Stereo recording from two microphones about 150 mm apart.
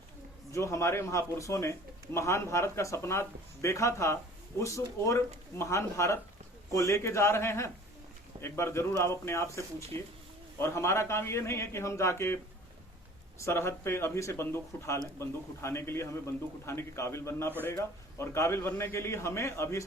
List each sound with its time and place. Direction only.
0.5 s a man's voice: 20° left (ahead or behind)
13.4 s a man's voice: 15° left (ahead or behind)